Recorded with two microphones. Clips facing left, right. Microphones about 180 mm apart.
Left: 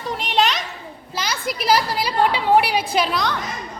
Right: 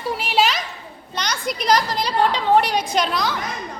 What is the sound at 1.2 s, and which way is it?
A woman's voice, 5° left (ahead or behind).